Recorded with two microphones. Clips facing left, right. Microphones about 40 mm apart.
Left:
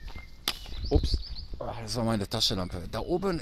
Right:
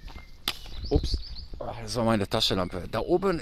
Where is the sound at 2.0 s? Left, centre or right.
Right.